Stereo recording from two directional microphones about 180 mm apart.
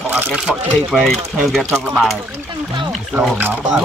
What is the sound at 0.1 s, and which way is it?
Speech, 5° right (ahead or behind).